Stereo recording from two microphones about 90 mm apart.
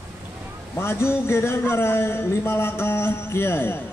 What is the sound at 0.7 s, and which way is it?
Speech, 25° left (ahead or behind).